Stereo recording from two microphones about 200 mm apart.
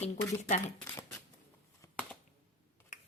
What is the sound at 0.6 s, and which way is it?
Speech, 10° left (ahead or behind).